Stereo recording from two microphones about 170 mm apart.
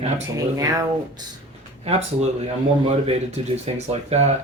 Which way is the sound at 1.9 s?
40° right (ahead or behind).